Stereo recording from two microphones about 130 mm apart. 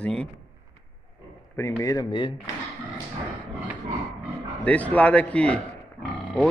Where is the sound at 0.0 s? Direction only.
10° left (ahead or behind).